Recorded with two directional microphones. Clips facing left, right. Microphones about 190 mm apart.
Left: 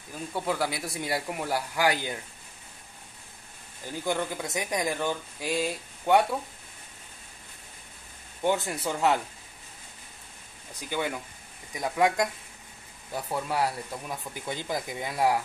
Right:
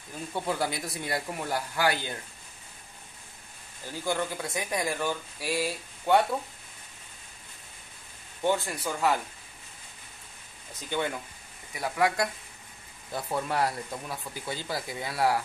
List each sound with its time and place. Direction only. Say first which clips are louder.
0.3 s speech: left 1 dB; centre (ahead or behind)
0.8 s speech: left 2 dB; 10° left (ahead or behind)
3.8 s speech: left 1 dB; 15° left (ahead or behind)
8.4 s speech: left 1 dB; 15° left (ahead or behind)
10.7 s speech: even; 10° left (ahead or behind)